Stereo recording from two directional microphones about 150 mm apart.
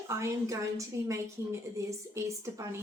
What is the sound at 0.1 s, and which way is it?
A woman's voice, 20° right (ahead or behind).